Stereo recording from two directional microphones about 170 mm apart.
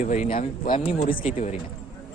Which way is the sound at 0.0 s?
50° left (ahead or behind).